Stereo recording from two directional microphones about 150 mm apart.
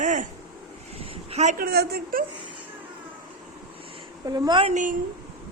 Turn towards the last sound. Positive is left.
turn(degrees=-60)  # may be behind; listen again after turning